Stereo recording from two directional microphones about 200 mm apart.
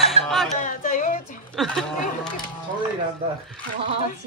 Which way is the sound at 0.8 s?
40° left (ahead or behind).